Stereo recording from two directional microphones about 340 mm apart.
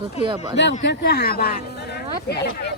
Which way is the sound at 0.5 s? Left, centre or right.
Left.